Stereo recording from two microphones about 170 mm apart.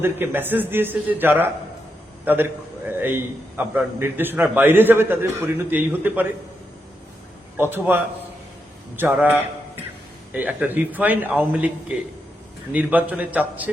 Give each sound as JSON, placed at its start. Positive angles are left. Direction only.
{"t": 0.0, "sound": "a man's voice", "side_deg": -10}
{"t": 7.5, "sound": "a man's voice", "side_deg": -10}